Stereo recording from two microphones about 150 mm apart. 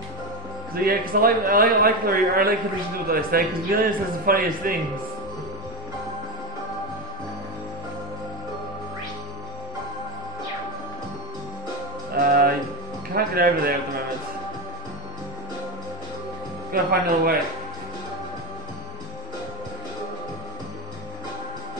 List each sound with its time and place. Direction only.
0.8 s a man's voice: 80° right
12.3 s music: 80° right
13.1 s a man's voice: 80° right
16.7 s a man's voice: 85° right